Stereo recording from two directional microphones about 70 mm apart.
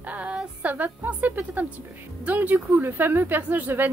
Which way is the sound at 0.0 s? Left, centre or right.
Centre.